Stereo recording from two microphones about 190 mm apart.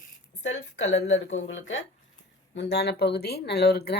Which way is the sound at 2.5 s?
60° left (ahead or behind).